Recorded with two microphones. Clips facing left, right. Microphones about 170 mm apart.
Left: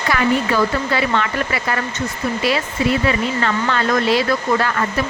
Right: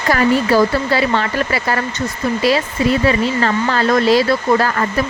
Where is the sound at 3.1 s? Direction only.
35° right (ahead or behind).